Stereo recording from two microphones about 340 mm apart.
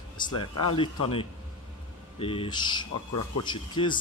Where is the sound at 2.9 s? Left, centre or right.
Left.